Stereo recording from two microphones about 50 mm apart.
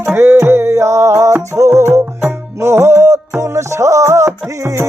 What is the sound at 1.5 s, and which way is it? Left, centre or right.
Music, right.